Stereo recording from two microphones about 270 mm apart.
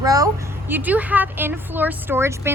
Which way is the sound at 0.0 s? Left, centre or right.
Centre.